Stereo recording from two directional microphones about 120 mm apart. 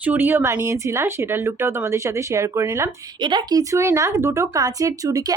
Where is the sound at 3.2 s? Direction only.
40° right (ahead or behind).